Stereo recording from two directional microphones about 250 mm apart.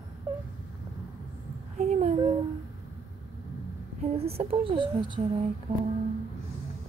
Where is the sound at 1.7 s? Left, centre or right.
Right.